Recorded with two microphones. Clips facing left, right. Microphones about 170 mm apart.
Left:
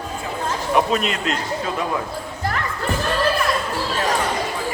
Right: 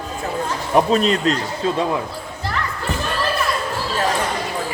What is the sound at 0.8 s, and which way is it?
Speech, 35° right (ahead or behind).